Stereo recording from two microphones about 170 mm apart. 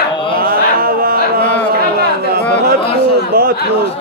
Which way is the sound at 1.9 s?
65° right (ahead or behind).